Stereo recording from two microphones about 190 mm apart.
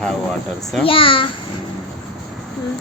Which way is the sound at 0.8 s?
30° left (ahead or behind).